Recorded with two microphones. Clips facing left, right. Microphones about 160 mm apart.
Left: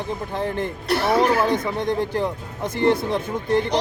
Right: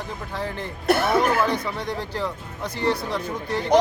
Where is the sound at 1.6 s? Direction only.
20° left (ahead or behind).